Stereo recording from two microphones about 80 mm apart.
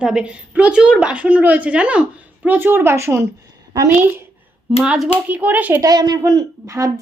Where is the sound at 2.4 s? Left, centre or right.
Right.